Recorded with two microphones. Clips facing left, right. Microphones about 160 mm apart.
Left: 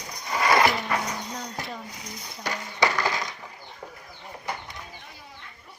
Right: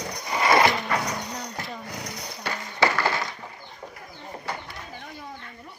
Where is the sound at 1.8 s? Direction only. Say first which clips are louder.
Right 5 dB; 70° right (ahead or behind).